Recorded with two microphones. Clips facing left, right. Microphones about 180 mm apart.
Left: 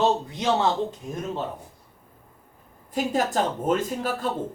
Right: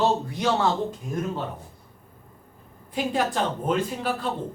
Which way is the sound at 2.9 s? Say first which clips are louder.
Left 1 dB; 45° left (ahead or behind).